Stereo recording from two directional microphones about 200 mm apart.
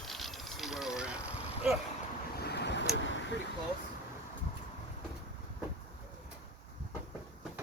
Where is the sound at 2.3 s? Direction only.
55° left (ahead or behind).